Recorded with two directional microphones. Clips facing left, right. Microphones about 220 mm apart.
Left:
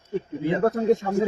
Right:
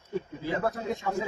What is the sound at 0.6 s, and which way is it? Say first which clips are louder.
Speech: left 13 dB; 45° left (ahead or behind).